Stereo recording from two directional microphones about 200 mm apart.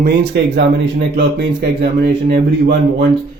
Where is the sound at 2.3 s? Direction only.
55° right (ahead or behind).